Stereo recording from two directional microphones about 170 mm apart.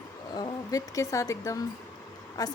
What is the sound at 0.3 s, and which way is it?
A woman's voice, 25° left (ahead or behind).